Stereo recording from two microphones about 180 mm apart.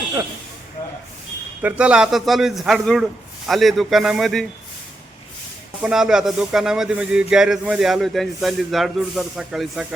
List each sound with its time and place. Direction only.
0.8 s a sound: 15° left (ahead or behind)
1.6 s a man's voice: 5° right (ahead or behind)
5.8 s a man's voice: 5° right (ahead or behind)